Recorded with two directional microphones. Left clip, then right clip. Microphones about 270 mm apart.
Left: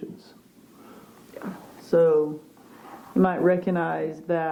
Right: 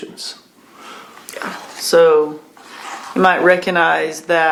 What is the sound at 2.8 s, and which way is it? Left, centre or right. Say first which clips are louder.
Speech: right 8 dB; centre.